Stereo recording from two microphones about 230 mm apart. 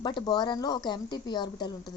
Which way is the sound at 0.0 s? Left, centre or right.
Centre.